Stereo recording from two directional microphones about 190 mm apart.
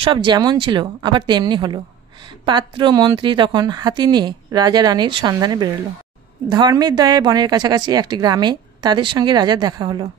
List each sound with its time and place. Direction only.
0.0 s a woman's voice: 25° right (ahead or behind)